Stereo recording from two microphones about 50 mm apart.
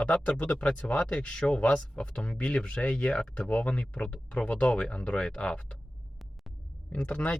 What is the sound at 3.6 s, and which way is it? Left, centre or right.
Speech, left.